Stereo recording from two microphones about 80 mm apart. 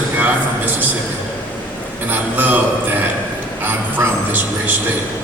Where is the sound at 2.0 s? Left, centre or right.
Right.